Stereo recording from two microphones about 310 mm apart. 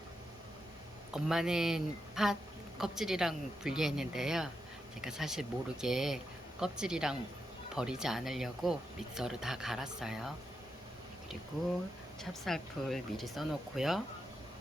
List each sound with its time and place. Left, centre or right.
1.1 s speech: centre
12.2 s speech: centre